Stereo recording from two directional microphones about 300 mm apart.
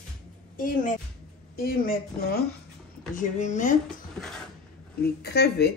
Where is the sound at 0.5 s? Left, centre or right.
Left.